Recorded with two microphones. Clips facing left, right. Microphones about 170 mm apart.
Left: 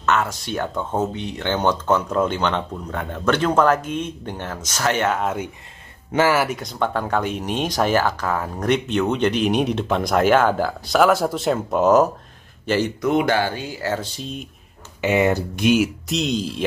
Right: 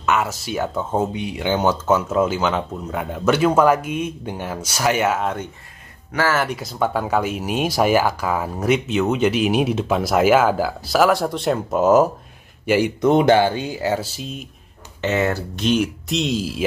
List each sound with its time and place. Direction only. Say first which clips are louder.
0.0 s speech: even; 10° right (ahead or behind)
6.1 s speech: left 3 dB; 15° left (ahead or behind)
6.4 s speech: right 1 dB; centre (ahead or behind)
13.0 s speech: right 7 dB; 25° right (ahead or behind)
14.0 s speech: even; 5° right (ahead or behind)
15.0 s speech: left 2 dB; 10° left (ahead or behind); by 16.6 s 5° right (ahead or behind)